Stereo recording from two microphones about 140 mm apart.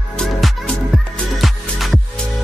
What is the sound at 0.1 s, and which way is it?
Music, 5° left (ahead or behind).